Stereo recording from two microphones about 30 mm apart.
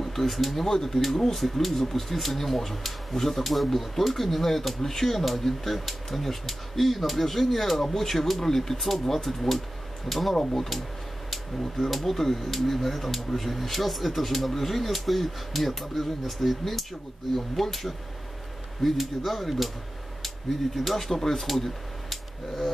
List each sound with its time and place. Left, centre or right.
0.0 s speech: centre
11.6 s speech: centre
20.7 s speech: centre
21.1 s speech: centre